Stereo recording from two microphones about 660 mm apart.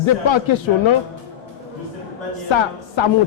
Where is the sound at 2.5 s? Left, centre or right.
Left.